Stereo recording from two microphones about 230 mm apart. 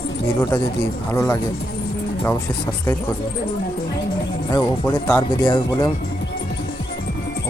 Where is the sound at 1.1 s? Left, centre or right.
Centre.